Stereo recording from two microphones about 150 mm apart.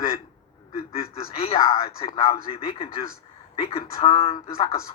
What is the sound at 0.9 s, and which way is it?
Speech, 40° left (ahead or behind).